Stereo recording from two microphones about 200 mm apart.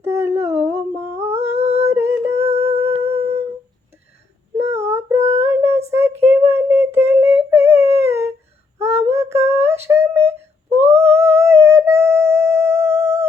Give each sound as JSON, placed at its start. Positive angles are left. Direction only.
{"t": 0.0, "sound": "humming", "side_deg": -15}
{"t": 1.2, "sound": "humming", "side_deg": -30}
{"t": 1.5, "sound": "a sound", "side_deg": -30}
{"t": 1.9, "sound": "a sound", "side_deg": -15}
{"t": 2.5, "sound": "music", "side_deg": -30}
{"t": 4.5, "sound": "child singing", "side_deg": -15}
{"t": 7.1, "sound": "humming", "side_deg": -10}
{"t": 8.8, "sound": "a sound", "side_deg": -15}
{"t": 11.0, "sound": "music", "side_deg": -15}